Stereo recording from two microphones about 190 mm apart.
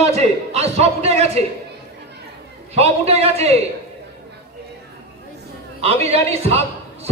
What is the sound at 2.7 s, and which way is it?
Speech, 35° right (ahead or behind).